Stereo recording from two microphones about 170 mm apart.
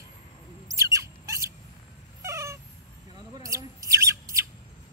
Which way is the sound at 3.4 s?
20° right (ahead or behind).